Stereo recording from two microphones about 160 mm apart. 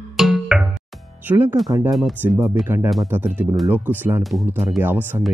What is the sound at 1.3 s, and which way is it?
Speech, 15° right (ahead or behind).